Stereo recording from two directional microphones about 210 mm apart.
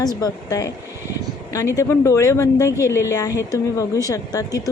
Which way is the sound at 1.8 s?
15° left (ahead or behind).